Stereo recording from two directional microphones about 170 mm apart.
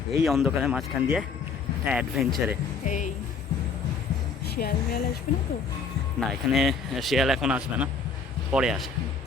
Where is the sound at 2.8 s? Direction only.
45° left (ahead or behind).